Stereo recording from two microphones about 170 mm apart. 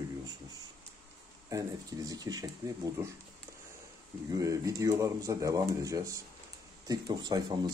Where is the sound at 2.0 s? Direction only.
20° right (ahead or behind).